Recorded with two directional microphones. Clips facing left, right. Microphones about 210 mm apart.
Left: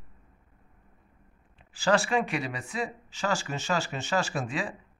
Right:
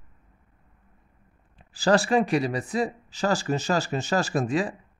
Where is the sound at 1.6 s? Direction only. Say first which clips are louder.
Right 4 dB; 35° right (ahead or behind).